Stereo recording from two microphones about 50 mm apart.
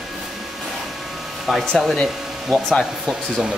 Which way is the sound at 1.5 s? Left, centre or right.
Centre.